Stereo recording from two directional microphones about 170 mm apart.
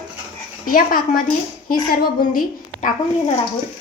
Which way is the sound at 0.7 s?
55° left (ahead or behind).